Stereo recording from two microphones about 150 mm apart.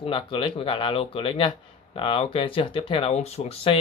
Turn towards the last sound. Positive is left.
turn(degrees=40)  # may be behind; listen again after turning